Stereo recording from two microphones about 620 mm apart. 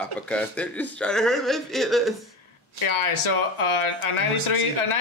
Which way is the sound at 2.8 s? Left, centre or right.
Left.